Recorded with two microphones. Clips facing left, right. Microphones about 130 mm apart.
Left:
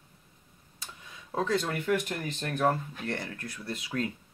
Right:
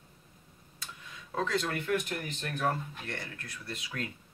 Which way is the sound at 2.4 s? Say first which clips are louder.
Left 5 dB; 45° left (ahead or behind).